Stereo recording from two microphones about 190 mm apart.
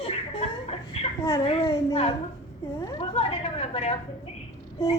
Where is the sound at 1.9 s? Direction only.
30° left (ahead or behind).